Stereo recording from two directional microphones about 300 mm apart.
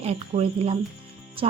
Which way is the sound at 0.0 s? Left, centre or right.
Right.